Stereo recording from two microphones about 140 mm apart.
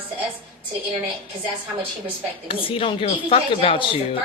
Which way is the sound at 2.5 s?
40° left (ahead or behind).